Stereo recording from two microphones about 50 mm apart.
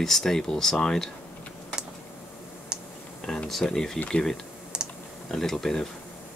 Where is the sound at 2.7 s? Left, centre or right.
Centre.